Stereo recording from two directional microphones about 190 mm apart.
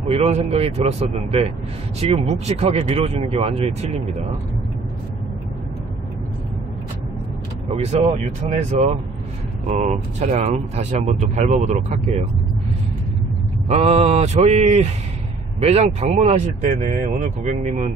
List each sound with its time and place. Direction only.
0.1 s speech: 35° right (ahead or behind)
7.8 s speech: 35° right (ahead or behind)
13.7 s speech: 35° right (ahead or behind)